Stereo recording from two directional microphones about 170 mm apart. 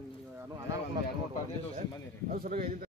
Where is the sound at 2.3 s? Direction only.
55° right (ahead or behind).